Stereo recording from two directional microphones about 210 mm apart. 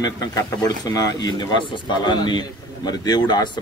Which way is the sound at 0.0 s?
15° left (ahead or behind).